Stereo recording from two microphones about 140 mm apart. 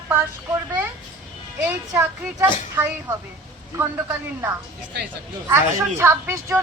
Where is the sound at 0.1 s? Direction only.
15° right (ahead or behind).